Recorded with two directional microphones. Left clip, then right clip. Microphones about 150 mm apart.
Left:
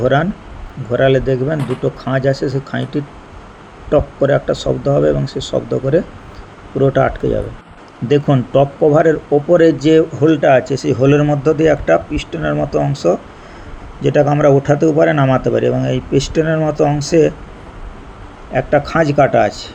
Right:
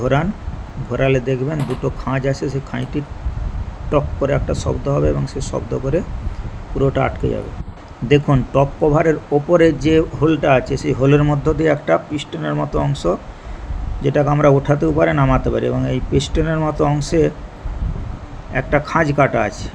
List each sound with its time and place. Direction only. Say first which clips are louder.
0.0 s a man's voice: left 4 dB; 20° left (ahead or behind)
18.5 s a man's voice: left 3 dB; 20° left (ahead or behind)